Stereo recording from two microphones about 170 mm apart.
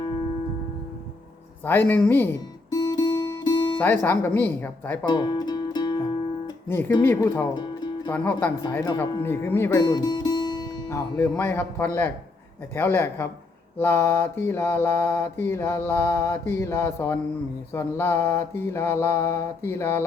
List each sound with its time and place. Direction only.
1.6 s mantra: 10° left (ahead or behind)
2.6 s music: 25° left (ahead or behind)
3.8 s mantra: 10° left (ahead or behind)
5.0 s music: 25° left (ahead or behind)
6.7 s mantra: 15° left (ahead or behind)
7.5 s music: 25° left (ahead or behind)
8.1 s mantra: 10° left (ahead or behind)
8.7 s speech: 15° left (ahead or behind)
9.2 s speech: 15° left (ahead or behind)
12.7 s mantra: 15° left (ahead or behind)